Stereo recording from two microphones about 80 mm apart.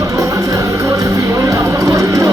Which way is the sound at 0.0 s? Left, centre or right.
Right.